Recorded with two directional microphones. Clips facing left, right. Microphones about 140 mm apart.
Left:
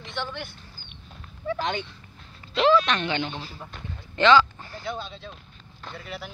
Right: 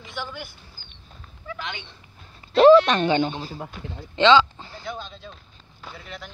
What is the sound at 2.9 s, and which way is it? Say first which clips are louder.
Speech: right 6 dB; 40° right (ahead or behind).